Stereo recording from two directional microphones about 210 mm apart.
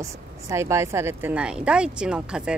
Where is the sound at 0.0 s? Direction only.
15° right (ahead or behind).